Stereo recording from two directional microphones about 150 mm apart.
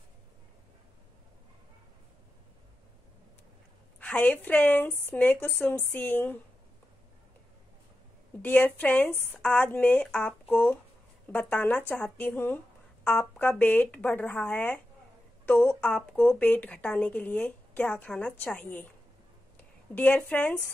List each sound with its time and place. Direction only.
4.0 s a woman's voice: 10° left (ahead or behind)
8.4 s a woman's voice: 10° left (ahead or behind)